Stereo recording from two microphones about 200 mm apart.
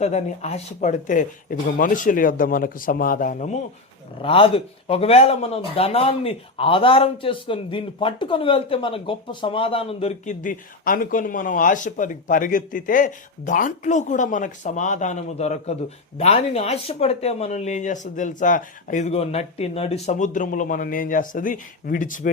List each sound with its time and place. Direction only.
0.0 s speech: 35° left (ahead or behind)
4.2 s speech: 25° left (ahead or behind); by 22.3 s 40° left (ahead or behind)